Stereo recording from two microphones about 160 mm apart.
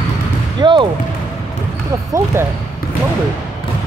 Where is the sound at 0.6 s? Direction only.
30° right (ahead or behind).